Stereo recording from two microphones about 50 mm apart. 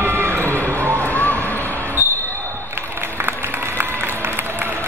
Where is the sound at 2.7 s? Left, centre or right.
Right.